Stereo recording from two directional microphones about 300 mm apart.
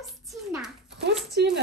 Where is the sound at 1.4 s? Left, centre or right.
Right.